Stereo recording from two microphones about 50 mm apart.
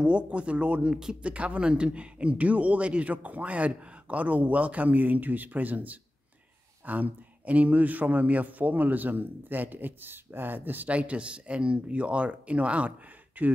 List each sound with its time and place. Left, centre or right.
0.0 s speech: right
10.9 s speech: right